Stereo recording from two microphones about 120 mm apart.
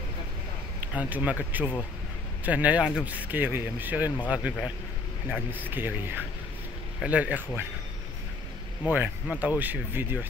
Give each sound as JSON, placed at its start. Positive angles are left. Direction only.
{"t": 0.7, "sound": "speech", "side_deg": -15}
{"t": 8.8, "sound": "speech", "side_deg": -15}